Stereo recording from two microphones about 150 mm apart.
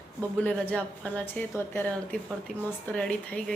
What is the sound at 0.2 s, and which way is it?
Speech, 10° left (ahead or behind).